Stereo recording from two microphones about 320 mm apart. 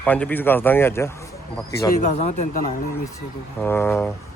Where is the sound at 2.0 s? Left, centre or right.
Left.